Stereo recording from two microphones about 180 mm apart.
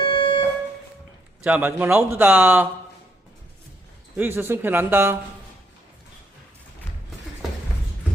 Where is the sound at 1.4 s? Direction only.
10° right (ahead or behind).